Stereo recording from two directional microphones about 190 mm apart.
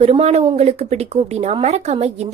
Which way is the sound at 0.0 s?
30° right (ahead or behind).